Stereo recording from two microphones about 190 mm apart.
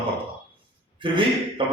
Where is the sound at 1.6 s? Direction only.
25° right (ahead or behind).